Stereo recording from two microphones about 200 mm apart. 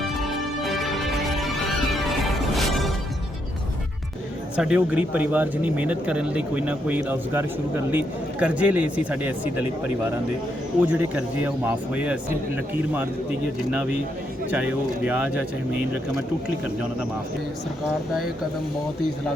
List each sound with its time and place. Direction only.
0.2 s music: centre (ahead or behind)
4.5 s speech: 5° right (ahead or behind)
14.5 s speech: 5° right (ahead or behind)